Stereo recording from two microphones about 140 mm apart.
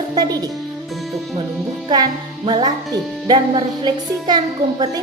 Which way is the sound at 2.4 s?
30° right (ahead or behind).